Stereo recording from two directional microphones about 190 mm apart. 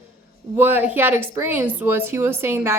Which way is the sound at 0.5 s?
10° right (ahead or behind).